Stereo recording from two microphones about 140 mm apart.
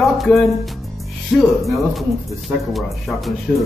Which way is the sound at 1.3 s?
Centre (ahead or behind).